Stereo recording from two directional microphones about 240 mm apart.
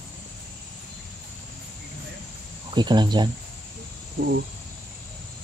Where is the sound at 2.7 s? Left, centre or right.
Centre.